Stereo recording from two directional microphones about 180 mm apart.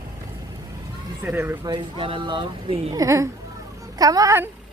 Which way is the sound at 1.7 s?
25° right (ahead or behind).